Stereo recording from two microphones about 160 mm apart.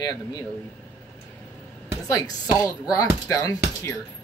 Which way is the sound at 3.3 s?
20° left (ahead or behind).